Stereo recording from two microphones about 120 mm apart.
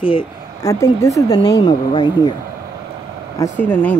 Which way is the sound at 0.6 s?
25° left (ahead or behind).